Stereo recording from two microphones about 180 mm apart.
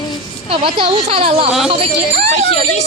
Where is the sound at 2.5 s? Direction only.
35° left (ahead or behind).